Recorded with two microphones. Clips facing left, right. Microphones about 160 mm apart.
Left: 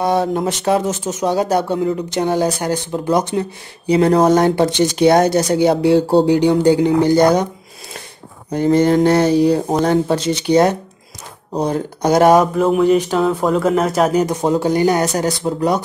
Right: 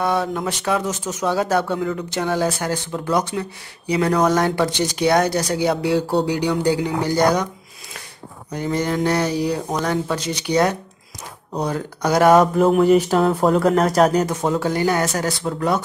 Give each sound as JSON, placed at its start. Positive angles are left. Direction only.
{"t": 0.0, "sound": "speech", "side_deg": 35}
{"t": 8.5, "sound": "speech", "side_deg": 30}
{"t": 12.5, "sound": "speech", "side_deg": 0}
{"t": 14.2, "sound": "speech", "side_deg": 15}